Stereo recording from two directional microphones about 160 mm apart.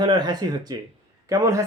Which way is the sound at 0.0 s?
25° right (ahead or behind).